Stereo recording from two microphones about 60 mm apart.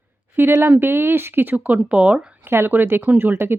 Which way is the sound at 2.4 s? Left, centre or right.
Right.